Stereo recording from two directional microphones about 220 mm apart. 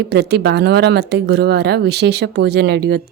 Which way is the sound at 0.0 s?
50° right (ahead or behind).